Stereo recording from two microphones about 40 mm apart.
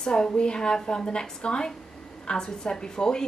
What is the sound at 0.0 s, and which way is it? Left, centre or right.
A woman's voice, centre.